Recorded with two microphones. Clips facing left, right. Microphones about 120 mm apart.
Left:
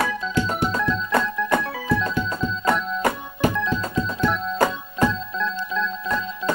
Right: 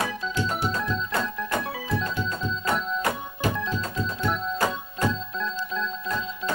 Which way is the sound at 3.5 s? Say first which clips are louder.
Left 5 dB; 80° left.